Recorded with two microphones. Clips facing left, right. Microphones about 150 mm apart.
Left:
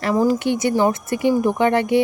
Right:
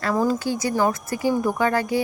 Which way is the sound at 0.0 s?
15° left (ahead or behind).